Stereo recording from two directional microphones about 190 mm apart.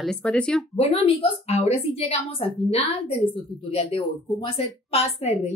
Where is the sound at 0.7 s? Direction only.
30° left (ahead or behind).